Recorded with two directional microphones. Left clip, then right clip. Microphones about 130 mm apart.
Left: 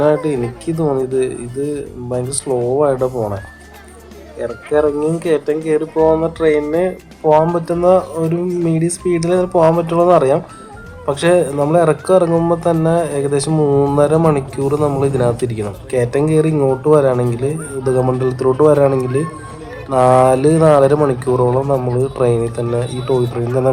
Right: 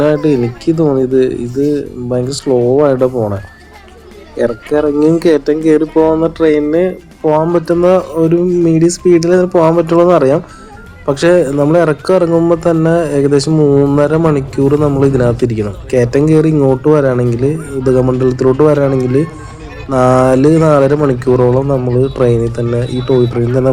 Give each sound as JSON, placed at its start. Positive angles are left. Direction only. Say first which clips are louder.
{"t": 0.0, "sound": "speech", "louder": "right 3 dB", "side_deg": -20}
{"t": 3.1, "sound": "speech", "louder": "right 4 dB", "side_deg": 0}
{"t": 4.4, "sound": "speech", "louder": "right 3 dB", "side_deg": -45}
{"t": 6.1, "sound": "speech", "louder": "right 3 dB", "side_deg": -15}
{"t": 7.5, "sound": "speech", "louder": "right 3 dB", "side_deg": -25}
{"t": 13.5, "sound": "speech", "louder": "right 4 dB", "side_deg": 0}
{"t": 13.9, "sound": "speech", "louder": "right 2 dB", "side_deg": -20}
{"t": 14.8, "sound": "speech", "louder": "right 3 dB", "side_deg": 0}
{"t": 15.0, "sound": "speech", "louder": "right 4 dB", "side_deg": -20}